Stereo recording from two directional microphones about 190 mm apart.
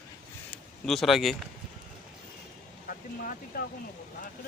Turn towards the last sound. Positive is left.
turn(degrees=50)  # may be behind; listen again after turning